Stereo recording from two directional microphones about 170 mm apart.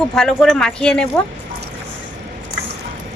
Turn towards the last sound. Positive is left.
turn(degrees=5)  # may be behind; listen again after turning